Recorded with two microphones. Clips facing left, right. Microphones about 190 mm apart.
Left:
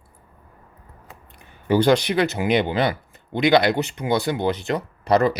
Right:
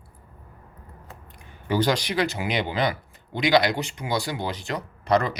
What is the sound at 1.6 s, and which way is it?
Speech, 55° left (ahead or behind).